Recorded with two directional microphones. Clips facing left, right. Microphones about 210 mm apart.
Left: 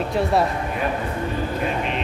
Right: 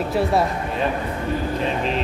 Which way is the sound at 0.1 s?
Centre (ahead or behind).